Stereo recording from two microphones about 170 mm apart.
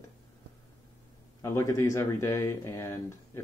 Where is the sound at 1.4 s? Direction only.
15° left (ahead or behind).